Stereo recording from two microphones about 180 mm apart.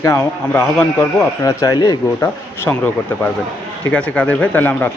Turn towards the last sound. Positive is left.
turn(degrees=10)  # may be behind; listen again after turning